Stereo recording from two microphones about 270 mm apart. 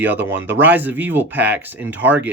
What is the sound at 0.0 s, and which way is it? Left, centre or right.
A man's voice, centre.